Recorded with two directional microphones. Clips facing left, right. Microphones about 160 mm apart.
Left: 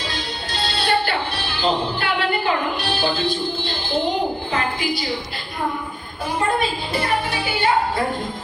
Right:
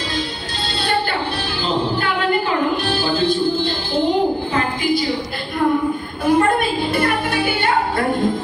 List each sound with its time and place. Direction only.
2.9 s music: 45° right (ahead or behind)
6.2 s music: 55° right (ahead or behind)